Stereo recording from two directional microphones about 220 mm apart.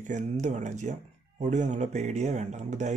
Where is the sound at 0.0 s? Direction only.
30° right (ahead or behind).